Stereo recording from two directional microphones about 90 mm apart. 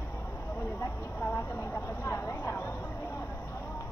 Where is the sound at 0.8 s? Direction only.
25° left (ahead or behind).